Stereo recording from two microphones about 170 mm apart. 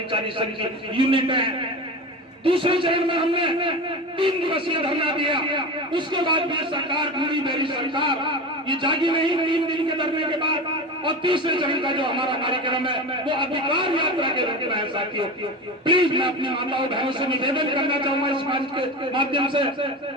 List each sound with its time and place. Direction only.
0.9 s a man's voice: 30° right (ahead or behind)